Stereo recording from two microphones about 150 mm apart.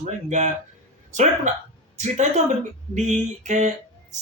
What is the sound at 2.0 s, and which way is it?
A man's voice, 50° right (ahead or behind).